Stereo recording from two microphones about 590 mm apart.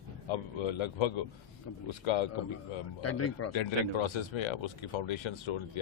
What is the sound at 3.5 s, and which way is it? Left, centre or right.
Speech, left.